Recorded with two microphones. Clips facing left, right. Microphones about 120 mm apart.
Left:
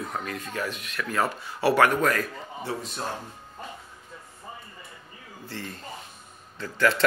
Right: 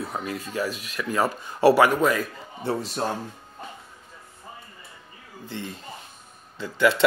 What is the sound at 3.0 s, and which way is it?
Speech, 40° right (ahead or behind).